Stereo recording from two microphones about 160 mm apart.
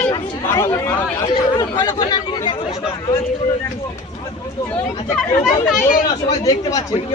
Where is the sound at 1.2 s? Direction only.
25° left (ahead or behind).